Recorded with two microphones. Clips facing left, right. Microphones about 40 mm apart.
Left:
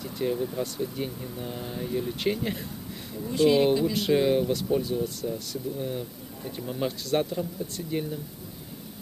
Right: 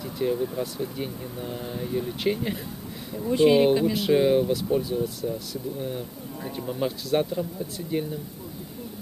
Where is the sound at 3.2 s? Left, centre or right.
Right.